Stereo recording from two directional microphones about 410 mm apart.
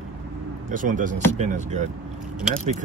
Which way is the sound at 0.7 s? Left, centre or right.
Centre.